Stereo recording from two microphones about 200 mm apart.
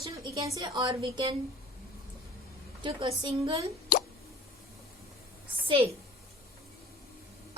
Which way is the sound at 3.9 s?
45° left (ahead or behind).